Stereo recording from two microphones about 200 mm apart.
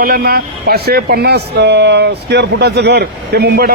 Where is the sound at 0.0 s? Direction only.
50° right (ahead or behind).